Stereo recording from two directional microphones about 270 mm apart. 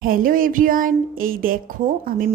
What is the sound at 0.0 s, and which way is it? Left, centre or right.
A woman's voice, right.